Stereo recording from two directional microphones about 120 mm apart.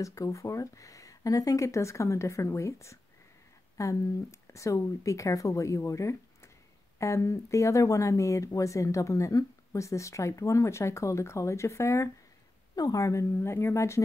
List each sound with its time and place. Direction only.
0.0 s speech: 25° left (ahead or behind)